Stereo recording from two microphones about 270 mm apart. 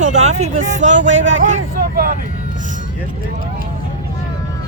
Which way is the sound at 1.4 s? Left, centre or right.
Right.